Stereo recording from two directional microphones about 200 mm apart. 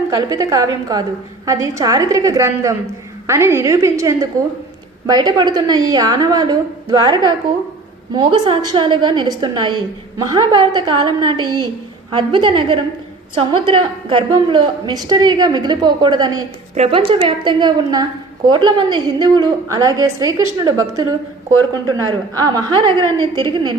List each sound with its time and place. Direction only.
0.1 s a woman's voice: 15° right (ahead or behind)
16.7 s a woman's voice: 30° right (ahead or behind)
21.8 s a woman's voice: 20° right (ahead or behind)